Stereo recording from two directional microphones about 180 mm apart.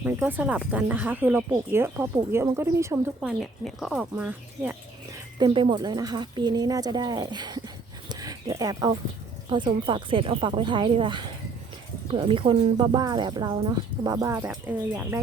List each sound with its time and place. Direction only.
0.0 s speech: 10° right (ahead or behind)
3.2 s speech: centre (ahead or behind)
5.4 s speech: 25° right (ahead or behind)
8.1 s a sound: 20° right (ahead or behind)
9.5 s speech: 25° right (ahead or behind)